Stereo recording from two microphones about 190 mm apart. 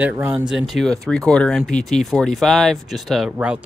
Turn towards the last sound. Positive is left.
turn(degrees=-5)  # may be behind; listen again after turning